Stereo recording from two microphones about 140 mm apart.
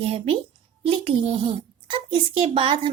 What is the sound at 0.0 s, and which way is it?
Speech, 45° right (ahead or behind).